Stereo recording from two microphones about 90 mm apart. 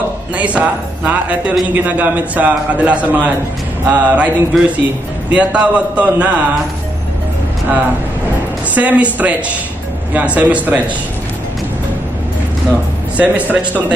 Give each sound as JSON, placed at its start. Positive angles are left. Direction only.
{"t": 0.4, "sound": "a man's voice", "side_deg": -15}
{"t": 8.7, "sound": "a man's voice", "side_deg": -15}
{"t": 13.2, "sound": "a man's voice", "side_deg": -15}